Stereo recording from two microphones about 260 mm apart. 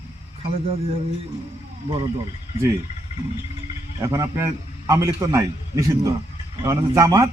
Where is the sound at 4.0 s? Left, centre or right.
Centre.